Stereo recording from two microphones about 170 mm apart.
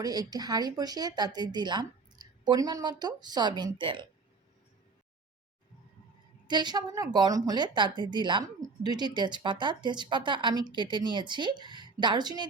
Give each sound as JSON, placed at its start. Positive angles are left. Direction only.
{"t": 0.0, "sound": "a woman's voice", "side_deg": -20}
{"t": 6.5, "sound": "a woman's voice", "side_deg": -25}